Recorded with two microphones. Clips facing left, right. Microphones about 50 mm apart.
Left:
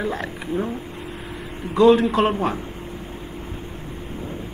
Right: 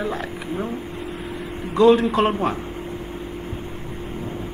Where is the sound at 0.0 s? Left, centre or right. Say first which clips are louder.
Even; centre.